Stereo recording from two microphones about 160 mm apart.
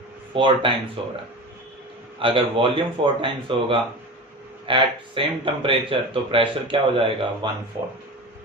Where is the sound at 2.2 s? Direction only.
35° right (ahead or behind).